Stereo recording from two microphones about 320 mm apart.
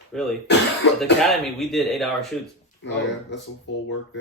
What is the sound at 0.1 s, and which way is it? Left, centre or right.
Speech, centre.